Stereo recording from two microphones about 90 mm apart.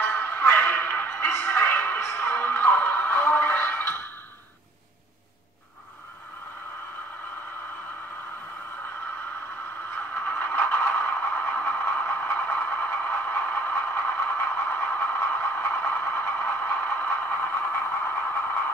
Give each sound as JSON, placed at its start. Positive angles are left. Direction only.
{"t": 0.0, "sound": "a sound", "side_deg": 25}
{"t": 2.0, "sound": "music", "side_deg": 30}
{"t": 10.2, "sound": "scrape", "side_deg": 20}